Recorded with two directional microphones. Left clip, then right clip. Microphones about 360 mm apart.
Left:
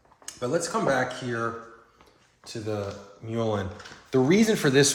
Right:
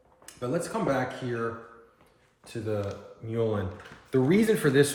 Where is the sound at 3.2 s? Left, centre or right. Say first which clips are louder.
Left 1 dB; centre.